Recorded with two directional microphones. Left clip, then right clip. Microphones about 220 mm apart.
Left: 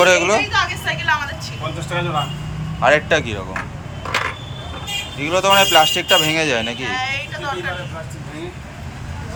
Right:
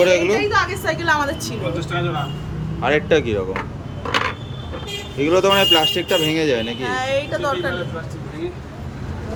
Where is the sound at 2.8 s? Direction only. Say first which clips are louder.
Left 2 dB; 10° right (ahead or behind).